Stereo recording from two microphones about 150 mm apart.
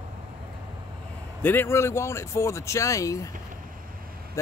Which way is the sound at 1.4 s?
15° left (ahead or behind).